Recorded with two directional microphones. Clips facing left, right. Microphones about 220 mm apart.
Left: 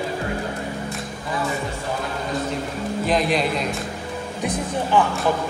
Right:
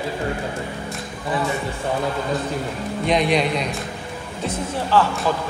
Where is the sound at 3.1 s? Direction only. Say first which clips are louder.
Right 2 dB; centre (ahead or behind).